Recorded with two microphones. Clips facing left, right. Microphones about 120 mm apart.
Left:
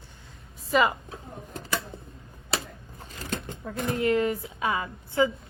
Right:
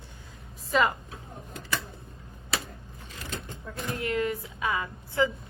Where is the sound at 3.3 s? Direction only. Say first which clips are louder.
Left 5 dB; 55° left (ahead or behind).